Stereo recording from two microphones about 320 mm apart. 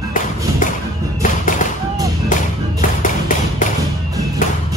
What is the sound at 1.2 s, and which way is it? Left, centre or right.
Music, left.